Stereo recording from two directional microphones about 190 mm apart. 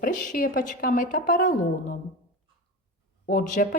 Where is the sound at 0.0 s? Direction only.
45° left (ahead or behind).